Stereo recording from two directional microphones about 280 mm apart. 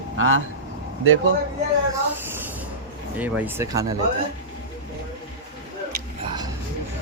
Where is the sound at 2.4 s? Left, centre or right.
Centre.